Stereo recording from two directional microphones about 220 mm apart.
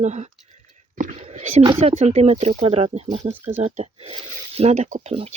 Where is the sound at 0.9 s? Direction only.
30° right (ahead or behind).